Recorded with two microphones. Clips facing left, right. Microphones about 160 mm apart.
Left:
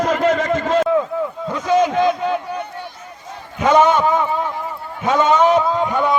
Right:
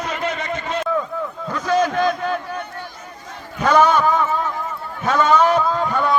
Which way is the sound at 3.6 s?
20° left (ahead or behind).